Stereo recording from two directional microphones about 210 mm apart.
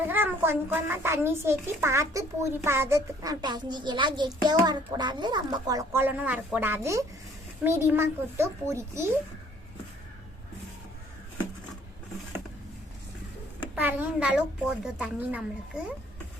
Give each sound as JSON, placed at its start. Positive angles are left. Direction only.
{"t": 0.1, "sound": "a child's voice", "side_deg": -10}
{"t": 13.7, "sound": "a child's voice", "side_deg": -10}